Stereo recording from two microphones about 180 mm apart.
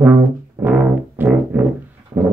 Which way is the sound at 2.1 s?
25° right (ahead or behind).